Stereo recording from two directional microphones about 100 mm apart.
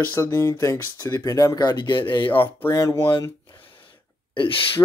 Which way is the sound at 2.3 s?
20° left (ahead or behind).